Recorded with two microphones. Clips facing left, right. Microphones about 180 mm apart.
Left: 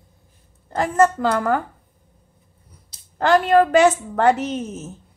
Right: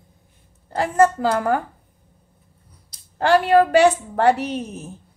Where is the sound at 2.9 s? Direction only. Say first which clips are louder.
Even; 25° left (ahead or behind).